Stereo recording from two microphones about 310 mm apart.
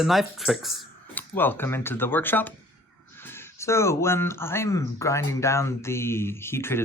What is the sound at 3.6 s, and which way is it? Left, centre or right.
Speech, centre.